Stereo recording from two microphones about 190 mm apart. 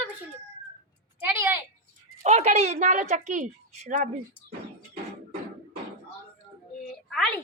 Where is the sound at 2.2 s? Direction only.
35° right (ahead or behind).